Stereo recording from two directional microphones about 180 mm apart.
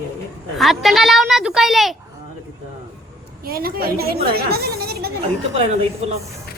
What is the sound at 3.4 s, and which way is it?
Speech, 55° right (ahead or behind).